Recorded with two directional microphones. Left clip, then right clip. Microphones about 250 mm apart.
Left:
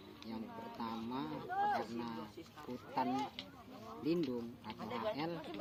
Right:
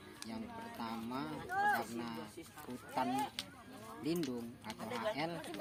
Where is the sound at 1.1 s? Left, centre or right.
Centre.